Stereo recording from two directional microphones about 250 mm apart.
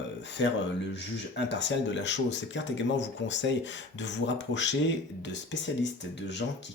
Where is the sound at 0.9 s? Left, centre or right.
Left.